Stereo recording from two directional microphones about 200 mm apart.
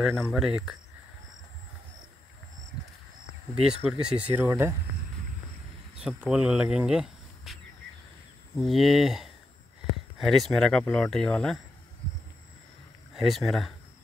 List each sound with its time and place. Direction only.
0.0 s speech: centre (ahead or behind)
3.6 s speech: 5° right (ahead or behind)
5.9 s speech: 5° right (ahead or behind)
8.5 s speech: centre (ahead or behind)
13.1 s speech: centre (ahead or behind)